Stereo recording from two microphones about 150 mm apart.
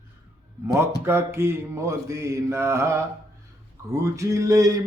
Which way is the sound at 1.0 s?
15° right (ahead or behind).